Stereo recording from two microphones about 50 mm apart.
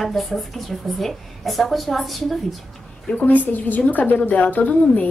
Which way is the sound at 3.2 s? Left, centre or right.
Left.